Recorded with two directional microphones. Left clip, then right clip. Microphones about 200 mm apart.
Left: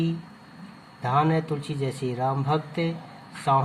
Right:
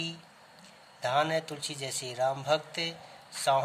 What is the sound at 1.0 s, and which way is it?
Speech, 65° right (ahead or behind).